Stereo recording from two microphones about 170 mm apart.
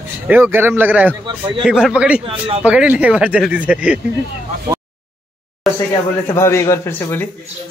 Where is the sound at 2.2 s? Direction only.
35° right (ahead or behind).